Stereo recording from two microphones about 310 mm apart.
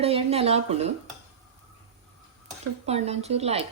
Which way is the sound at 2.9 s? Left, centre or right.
Centre.